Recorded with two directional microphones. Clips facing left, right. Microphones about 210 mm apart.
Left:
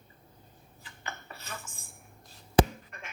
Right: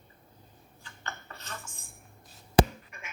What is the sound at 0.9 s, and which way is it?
Dishes, 10° left (ahead or behind).